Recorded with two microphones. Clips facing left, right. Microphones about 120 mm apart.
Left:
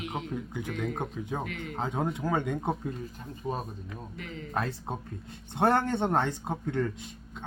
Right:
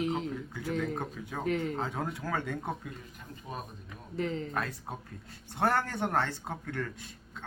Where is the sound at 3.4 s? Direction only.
35° left (ahead or behind).